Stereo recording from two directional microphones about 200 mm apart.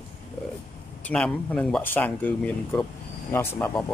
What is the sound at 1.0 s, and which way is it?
Speech, 5° left (ahead or behind).